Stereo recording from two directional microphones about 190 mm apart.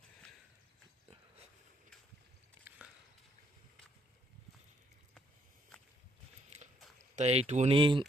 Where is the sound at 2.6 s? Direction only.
5° right (ahead or behind).